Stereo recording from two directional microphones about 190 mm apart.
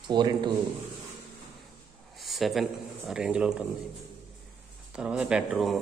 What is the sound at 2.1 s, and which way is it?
Speech, centre (ahead or behind).